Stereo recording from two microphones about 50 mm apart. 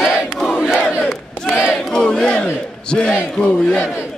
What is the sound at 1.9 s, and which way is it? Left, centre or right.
Battle cry, centre.